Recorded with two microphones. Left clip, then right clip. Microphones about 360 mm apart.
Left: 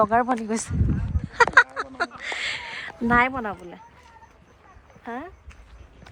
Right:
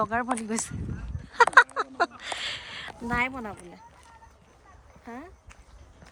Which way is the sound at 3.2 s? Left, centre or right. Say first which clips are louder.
Left 6 dB; centre.